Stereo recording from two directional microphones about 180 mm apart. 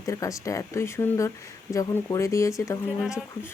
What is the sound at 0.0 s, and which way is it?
Speech, 20° left (ahead or behind).